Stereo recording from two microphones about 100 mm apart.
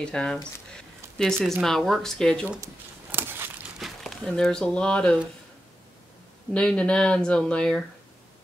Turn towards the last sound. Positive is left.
turn(degrees=10)  # may be behind; listen again after turning